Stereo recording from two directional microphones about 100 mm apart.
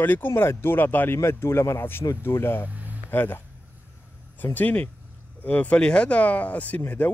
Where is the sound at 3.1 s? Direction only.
20° left (ahead or behind).